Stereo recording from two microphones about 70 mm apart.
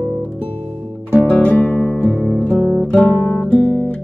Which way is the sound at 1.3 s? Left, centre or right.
Left.